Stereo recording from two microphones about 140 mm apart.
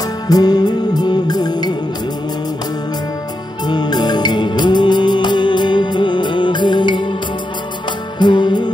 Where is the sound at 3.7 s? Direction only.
30° left (ahead or behind).